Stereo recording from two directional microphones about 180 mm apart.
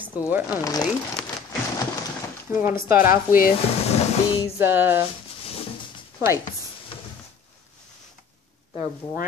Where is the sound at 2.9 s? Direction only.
55° left (ahead or behind).